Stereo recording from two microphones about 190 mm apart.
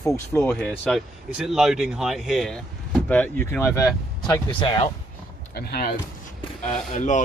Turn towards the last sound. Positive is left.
turn(degrees=40)  # may be behind; listen again after turning